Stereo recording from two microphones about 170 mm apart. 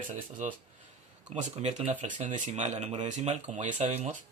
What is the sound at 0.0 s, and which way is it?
Speech, 50° right (ahead or behind).